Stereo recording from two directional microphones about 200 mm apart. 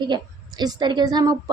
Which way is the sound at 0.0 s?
20° right (ahead or behind).